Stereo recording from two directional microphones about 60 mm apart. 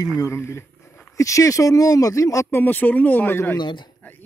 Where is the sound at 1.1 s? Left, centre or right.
Left.